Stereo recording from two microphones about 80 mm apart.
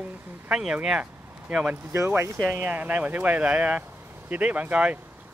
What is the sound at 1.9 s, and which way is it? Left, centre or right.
Speech, right.